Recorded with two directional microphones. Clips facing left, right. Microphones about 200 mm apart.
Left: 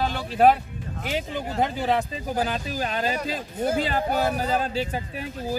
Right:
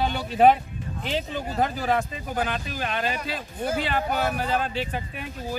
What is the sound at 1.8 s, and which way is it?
Speech, 25° left (ahead or behind).